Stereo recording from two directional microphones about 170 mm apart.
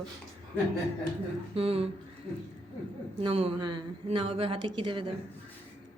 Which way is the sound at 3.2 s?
35° right (ahead or behind).